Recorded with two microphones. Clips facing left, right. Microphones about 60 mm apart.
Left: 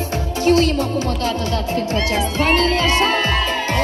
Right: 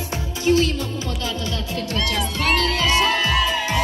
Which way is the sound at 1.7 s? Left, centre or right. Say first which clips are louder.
Left 3 dB; left.